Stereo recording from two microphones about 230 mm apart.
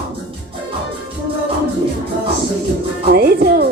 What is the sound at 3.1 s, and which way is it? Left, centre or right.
Music, right.